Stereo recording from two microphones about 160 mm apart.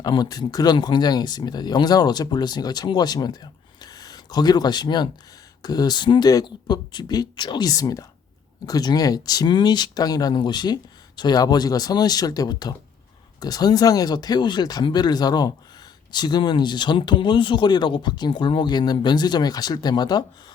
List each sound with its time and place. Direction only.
0.0 s speech: 25° left (ahead or behind)